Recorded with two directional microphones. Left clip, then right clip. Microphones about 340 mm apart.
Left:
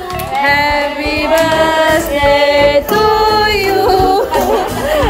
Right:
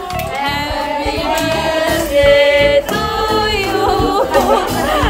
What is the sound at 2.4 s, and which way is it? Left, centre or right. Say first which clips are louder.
Music: left 1 dB; centre.